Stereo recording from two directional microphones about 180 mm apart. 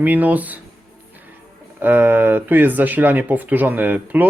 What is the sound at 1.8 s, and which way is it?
Speech, 10° right (ahead or behind).